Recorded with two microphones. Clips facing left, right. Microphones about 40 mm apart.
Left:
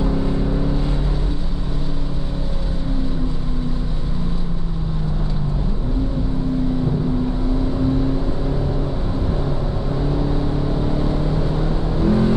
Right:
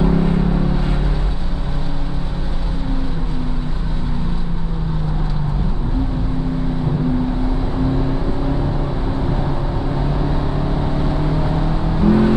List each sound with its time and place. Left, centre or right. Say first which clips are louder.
0.0 s vehicle: right 4 dB; right
10.1 s vehicle: even; right